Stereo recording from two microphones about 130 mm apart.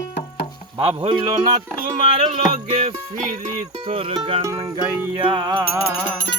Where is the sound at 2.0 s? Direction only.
45° right (ahead or behind).